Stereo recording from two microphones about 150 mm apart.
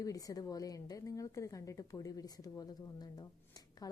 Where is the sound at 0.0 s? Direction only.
25° left (ahead or behind).